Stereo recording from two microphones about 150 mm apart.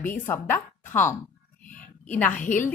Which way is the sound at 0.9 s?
15° left (ahead or behind).